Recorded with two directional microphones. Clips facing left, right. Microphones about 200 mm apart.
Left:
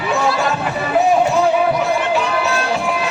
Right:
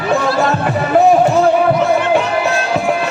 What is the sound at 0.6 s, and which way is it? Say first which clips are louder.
Music: right 5 dB; 50° right (ahead or behind).